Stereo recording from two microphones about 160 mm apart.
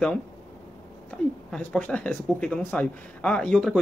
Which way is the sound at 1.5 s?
5° left (ahead or behind).